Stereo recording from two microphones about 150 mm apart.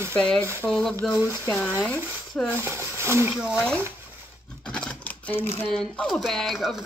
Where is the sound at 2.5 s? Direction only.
15° right (ahead or behind).